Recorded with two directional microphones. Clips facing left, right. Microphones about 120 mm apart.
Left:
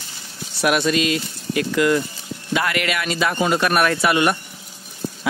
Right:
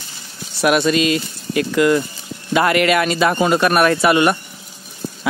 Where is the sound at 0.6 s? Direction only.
35° right (ahead or behind).